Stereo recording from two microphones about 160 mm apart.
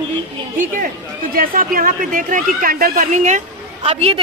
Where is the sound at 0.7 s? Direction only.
65° right (ahead or behind).